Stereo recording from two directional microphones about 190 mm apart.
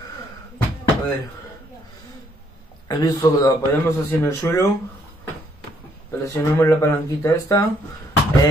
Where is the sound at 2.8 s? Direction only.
20° left (ahead or behind).